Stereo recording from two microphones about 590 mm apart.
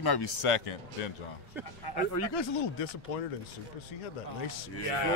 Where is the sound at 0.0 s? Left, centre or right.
Left.